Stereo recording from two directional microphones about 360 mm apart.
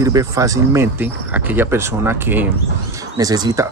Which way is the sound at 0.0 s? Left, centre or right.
Centre.